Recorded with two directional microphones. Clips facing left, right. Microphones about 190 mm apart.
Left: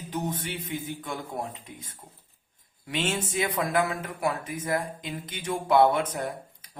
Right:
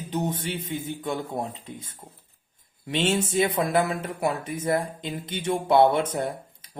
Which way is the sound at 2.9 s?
30° right (ahead or behind).